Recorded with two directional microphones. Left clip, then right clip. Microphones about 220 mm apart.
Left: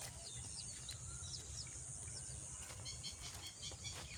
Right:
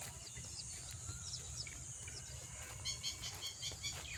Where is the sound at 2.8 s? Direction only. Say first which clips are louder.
Right 8 dB; 45° left (ahead or behind).